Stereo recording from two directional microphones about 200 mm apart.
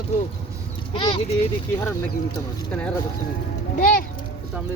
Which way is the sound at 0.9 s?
25° left (ahead or behind).